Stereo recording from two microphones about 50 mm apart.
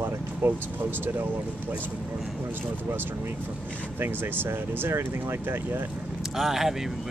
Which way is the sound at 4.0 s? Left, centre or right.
Right.